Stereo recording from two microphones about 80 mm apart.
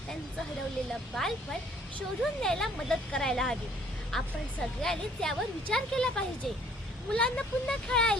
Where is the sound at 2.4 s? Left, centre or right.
Centre.